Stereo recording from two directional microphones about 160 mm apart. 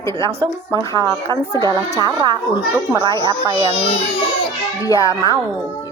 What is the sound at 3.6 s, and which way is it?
Speech, 35° left (ahead or behind).